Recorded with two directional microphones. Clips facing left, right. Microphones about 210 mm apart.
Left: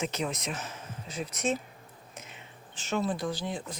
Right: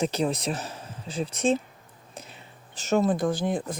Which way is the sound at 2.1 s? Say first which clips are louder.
Right 5 dB; 35° right (ahead or behind).